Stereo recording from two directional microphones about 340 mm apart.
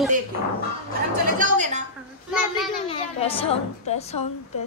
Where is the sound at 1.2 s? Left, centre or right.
Right.